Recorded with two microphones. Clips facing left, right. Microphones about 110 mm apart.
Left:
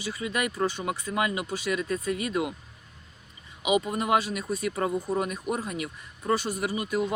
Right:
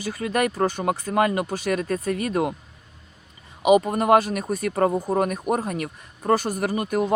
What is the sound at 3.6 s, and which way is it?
Speech, 45° right (ahead or behind).